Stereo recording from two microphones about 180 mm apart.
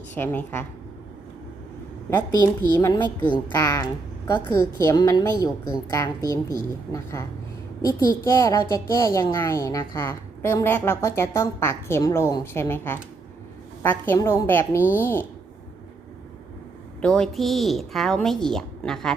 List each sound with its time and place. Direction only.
0.1 s a child's voice: 10° left (ahead or behind)
2.0 s a child's voice: 15° left (ahead or behind)
17.0 s a woman's voice: 5° left (ahead or behind)